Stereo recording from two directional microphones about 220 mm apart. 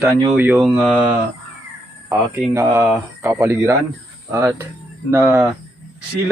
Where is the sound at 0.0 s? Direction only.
10° right (ahead or behind).